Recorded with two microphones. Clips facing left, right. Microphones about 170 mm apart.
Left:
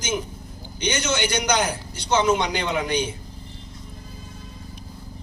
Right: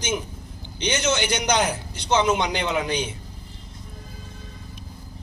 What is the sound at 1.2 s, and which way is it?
A man's voice, 25° right (ahead or behind).